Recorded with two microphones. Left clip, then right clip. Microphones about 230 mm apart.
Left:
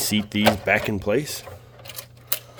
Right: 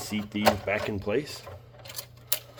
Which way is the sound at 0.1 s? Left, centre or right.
Left.